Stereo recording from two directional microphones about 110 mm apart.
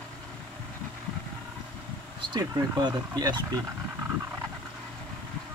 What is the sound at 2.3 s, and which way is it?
Speech, 40° right (ahead or behind).